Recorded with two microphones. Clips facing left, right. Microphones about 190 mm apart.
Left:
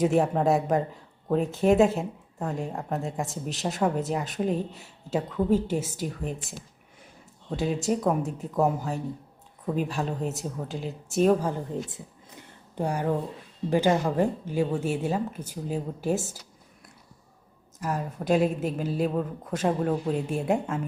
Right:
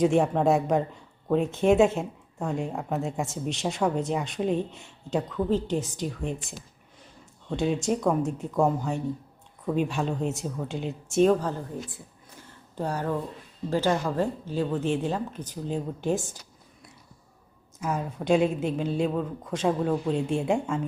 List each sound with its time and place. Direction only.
0.0 s a woman's voice: 5° left (ahead or behind)
7.5 s a woman's voice: centre (ahead or behind)
11.7 s a sound: 20° left (ahead or behind)
13.7 s speech: 15° left (ahead or behind)
17.7 s a woman's voice: centre (ahead or behind)